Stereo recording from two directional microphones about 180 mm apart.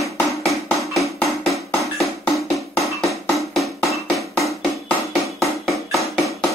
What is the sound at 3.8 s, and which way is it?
Music, centre (ahead or behind).